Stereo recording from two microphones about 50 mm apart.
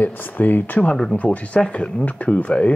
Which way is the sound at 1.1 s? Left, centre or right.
Left.